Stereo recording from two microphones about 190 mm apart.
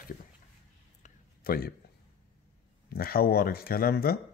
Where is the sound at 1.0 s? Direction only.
50° left (ahead or behind).